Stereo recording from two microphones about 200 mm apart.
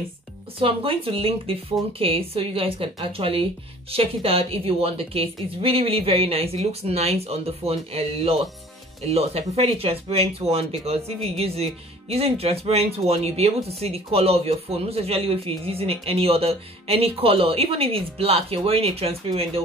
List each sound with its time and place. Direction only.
0.6 s speech: 25° right (ahead or behind)